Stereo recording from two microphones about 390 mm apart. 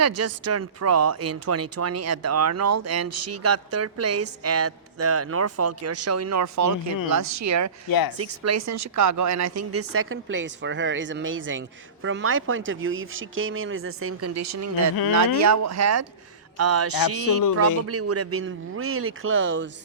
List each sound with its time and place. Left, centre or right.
0.0 s speech: right
3.1 s speech: right
3.4 s speech: right
7.9 s speech: left
8.2 s speech: right